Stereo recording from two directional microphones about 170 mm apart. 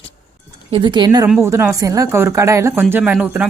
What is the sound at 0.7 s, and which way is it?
Speech, 30° right (ahead or behind).